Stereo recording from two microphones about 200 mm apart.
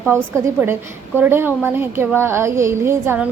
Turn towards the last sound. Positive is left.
turn(degrees=-10)  # may be behind; listen again after turning